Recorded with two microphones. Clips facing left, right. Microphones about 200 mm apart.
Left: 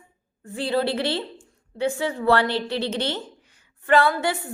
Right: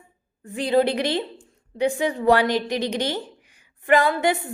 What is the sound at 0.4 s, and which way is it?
A woman's voice, 15° right (ahead or behind).